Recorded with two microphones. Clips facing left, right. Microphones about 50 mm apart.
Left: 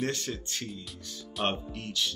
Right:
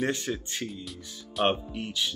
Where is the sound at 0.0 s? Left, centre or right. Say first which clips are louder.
Right 3 dB; centre.